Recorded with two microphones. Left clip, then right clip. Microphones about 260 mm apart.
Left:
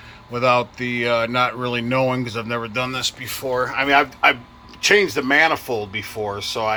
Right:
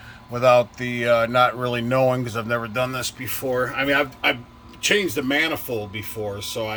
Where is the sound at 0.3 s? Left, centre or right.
Centre.